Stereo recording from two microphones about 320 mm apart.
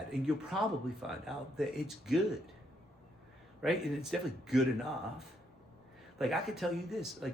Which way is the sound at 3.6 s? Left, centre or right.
Centre.